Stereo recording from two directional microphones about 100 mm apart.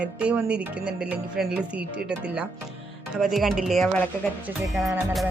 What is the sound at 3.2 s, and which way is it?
Speech, centre (ahead or behind).